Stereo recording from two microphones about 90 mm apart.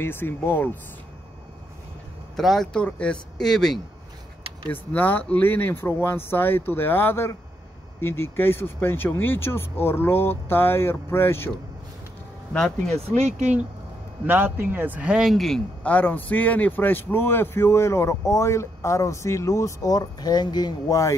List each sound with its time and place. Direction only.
0.0 s speech: 25° left (ahead or behind)
2.3 s speech: centre (ahead or behind)
4.6 s speech: 20° left (ahead or behind)
12.5 s speech: 10° left (ahead or behind)
14.2 s speech: 20° right (ahead or behind); by 15.6 s centre (ahead or behind)
15.8 s a man's voice: 15° left (ahead or behind); by 21.0 s 50° left (ahead or behind)